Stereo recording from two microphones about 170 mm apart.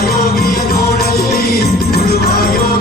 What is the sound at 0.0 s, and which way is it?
Music, 65° left (ahead or behind).